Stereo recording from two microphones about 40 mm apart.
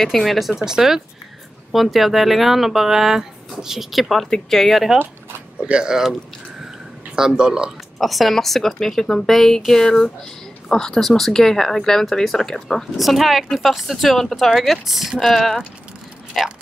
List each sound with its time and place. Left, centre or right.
0.0 s speech: centre
0.6 s speech: centre
1.7 s speech: centre
5.6 s speech: right
7.2 s speech: centre
8.0 s speech: centre
11.0 s speech: centre
12.9 s speech: centre